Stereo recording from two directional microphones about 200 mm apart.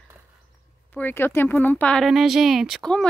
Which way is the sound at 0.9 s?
10° left (ahead or behind).